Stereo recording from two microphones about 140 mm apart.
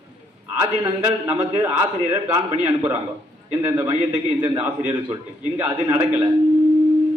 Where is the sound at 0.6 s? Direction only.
15° right (ahead or behind).